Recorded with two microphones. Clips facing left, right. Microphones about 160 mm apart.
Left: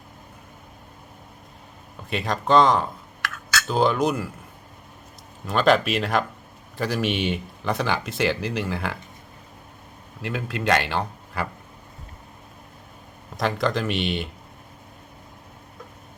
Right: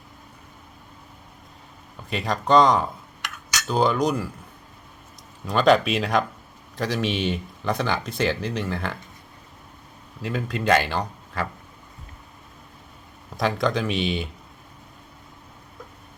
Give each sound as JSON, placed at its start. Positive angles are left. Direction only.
{"t": 2.0, "sound": "speech", "side_deg": 0}
{"t": 3.2, "sound": "a sound", "side_deg": -20}
{"t": 3.7, "sound": "speech", "side_deg": 0}
{"t": 5.5, "sound": "speech", "side_deg": 0}
{"t": 10.2, "sound": "speech", "side_deg": 0}
{"t": 13.3, "sound": "speech", "side_deg": 0}